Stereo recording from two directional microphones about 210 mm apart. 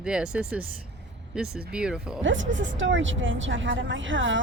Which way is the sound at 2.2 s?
65° right (ahead or behind).